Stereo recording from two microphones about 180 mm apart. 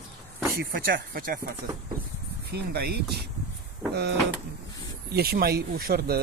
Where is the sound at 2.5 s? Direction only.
60° right (ahead or behind).